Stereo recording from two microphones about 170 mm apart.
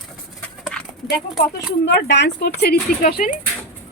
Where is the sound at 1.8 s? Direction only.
90° left.